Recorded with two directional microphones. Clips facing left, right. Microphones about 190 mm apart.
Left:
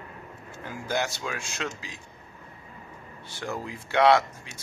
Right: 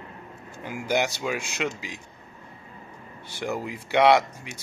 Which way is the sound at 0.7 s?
15° right (ahead or behind).